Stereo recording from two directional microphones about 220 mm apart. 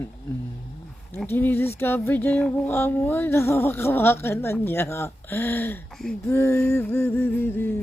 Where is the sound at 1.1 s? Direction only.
10° left (ahead or behind).